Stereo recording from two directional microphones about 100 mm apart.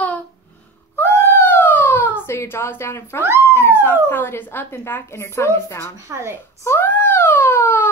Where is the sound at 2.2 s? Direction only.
25° left (ahead or behind).